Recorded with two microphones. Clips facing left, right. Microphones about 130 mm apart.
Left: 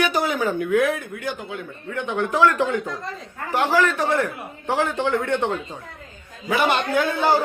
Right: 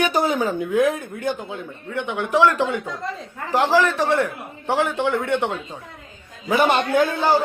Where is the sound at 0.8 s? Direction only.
45° right (ahead or behind).